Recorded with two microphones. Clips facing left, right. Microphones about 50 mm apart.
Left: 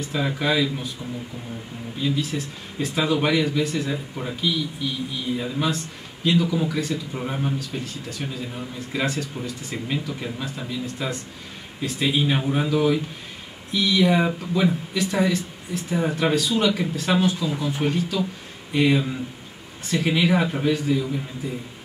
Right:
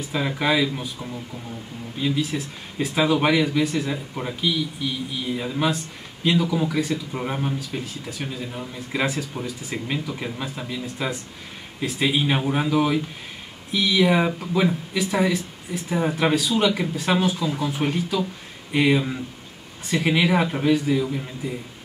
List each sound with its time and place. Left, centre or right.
0.1 s speech: centre
2.0 s speech: centre